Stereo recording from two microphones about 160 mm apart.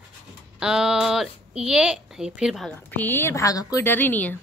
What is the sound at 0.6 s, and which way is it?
A woman's voice, 5° right (ahead or behind).